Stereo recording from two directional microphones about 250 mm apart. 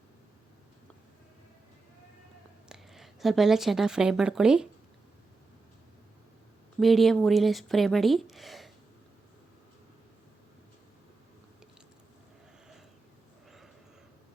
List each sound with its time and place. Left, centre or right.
2.6 s speech: centre
6.7 s speech: centre